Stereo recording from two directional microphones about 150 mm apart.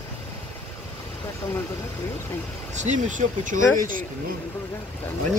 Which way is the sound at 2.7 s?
55° right (ahead or behind).